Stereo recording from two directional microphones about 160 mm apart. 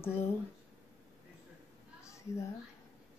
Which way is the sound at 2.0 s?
20° left (ahead or behind).